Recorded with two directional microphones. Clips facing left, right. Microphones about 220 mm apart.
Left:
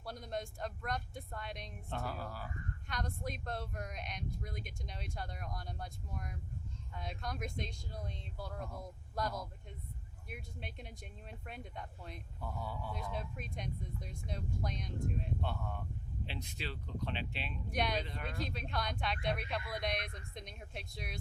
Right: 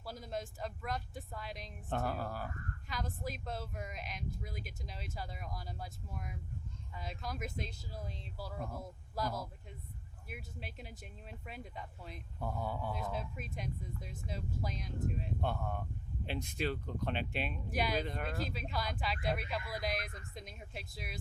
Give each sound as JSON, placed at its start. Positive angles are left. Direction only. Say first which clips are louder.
{"t": 0.0, "sound": "speech", "louder": "even", "side_deg": 0}
{"t": 1.9, "sound": "speech", "louder": "right 5 dB", "side_deg": -50}
{"t": 2.8, "sound": "speech", "louder": "even", "side_deg": 0}
{"t": 12.4, "sound": "speech", "louder": "right 5 dB", "side_deg": -50}
{"t": 13.1, "sound": "speech", "louder": "right 1 dB", "side_deg": -5}
{"t": 15.4, "sound": "speech", "louder": "right 3 dB", "side_deg": -50}
{"t": 17.7, "sound": "speech", "louder": "even", "side_deg": -5}
{"t": 18.0, "sound": "speech", "louder": "right 5 dB", "side_deg": -50}
{"t": 18.3, "sound": "speech", "louder": "right 1 dB", "side_deg": -5}